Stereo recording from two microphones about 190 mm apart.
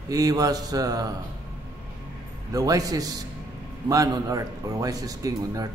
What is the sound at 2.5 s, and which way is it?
A man's voice, 20° right (ahead or behind).